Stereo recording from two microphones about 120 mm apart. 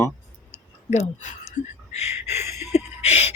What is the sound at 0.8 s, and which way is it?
Speech, 80° left.